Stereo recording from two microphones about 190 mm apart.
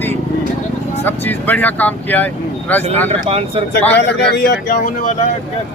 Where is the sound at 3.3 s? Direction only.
30° right (ahead or behind).